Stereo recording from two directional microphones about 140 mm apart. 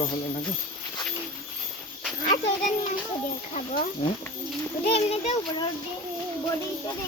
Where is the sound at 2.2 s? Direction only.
60° left (ahead or behind).